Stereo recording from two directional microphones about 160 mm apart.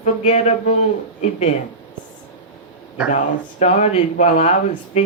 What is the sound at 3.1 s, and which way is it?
Speech, 50° left (ahead or behind).